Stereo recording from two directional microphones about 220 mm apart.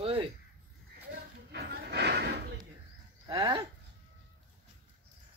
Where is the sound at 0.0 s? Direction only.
25° right (ahead or behind).